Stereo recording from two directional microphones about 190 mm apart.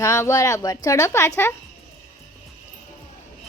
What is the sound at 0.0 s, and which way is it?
A woman's voice, 15° left (ahead or behind).